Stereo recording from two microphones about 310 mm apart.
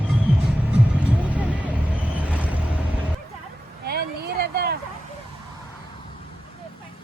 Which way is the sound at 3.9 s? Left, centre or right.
Right.